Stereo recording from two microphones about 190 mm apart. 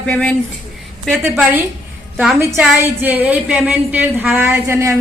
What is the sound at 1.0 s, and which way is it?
A woman's voice, 5° right (ahead or behind).